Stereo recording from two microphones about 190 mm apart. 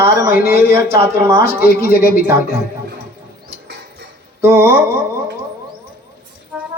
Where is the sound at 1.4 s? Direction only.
50° left (ahead or behind).